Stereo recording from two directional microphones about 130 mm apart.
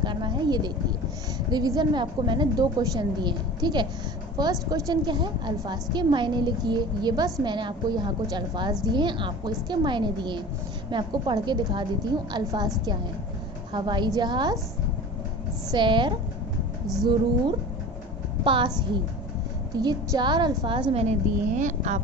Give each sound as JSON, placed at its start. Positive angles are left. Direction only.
{"t": 0.0, "sound": "a sound", "side_deg": -35}
{"t": 1.5, "sound": "a woman's voice", "side_deg": -30}
{"t": 13.7, "sound": "a woman's voice", "side_deg": -35}
{"t": 15.7, "sound": "a woman's voice", "side_deg": -35}
{"t": 16.8, "sound": "music", "side_deg": 0}
{"t": 18.4, "sound": "a woman's voice", "side_deg": -40}
{"t": 20.9, "sound": "a woman's voice", "side_deg": -50}
{"t": 21.5, "sound": "speech", "side_deg": -70}